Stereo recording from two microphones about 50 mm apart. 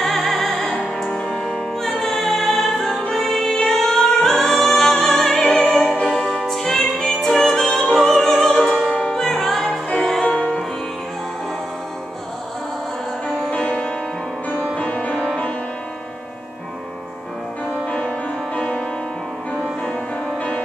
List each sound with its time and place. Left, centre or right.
0.0 s music: centre
5.7 s opera: centre
6.0 s music: centre
10.3 s music: left
13.5 s music: left
17.8 s music: left